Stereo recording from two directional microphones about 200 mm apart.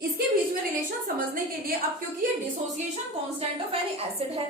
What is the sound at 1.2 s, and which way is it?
Speech, 45° right (ahead or behind).